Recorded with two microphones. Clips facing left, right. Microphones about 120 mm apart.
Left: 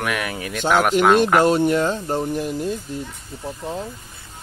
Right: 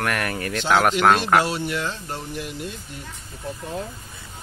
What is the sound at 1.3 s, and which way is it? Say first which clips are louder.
Speech: left 6 dB; 45° left (ahead or behind).